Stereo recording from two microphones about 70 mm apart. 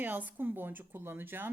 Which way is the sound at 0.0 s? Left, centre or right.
Right.